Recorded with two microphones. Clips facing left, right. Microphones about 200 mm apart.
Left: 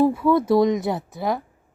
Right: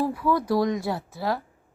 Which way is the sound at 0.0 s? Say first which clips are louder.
Left 6 dB; 25° left (ahead or behind).